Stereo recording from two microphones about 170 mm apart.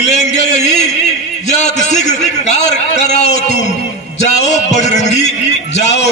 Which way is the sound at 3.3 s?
60° right (ahead or behind).